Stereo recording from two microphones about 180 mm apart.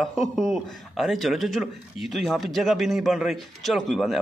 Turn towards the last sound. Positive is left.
turn(degrees=0)  # may be behind; listen again after turning